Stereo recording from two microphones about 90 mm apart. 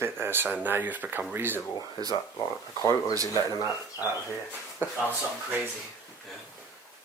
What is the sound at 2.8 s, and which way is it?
Speech, 45° left (ahead or behind).